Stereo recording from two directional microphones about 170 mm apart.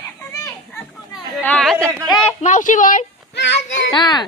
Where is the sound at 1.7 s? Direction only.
15° right (ahead or behind).